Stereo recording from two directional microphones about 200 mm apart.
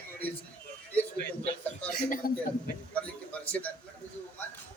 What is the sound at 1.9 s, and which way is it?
Speech, 45° left (ahead or behind).